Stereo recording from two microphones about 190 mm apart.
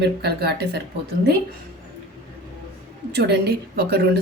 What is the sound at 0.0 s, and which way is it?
Speech, 60° right (ahead or behind).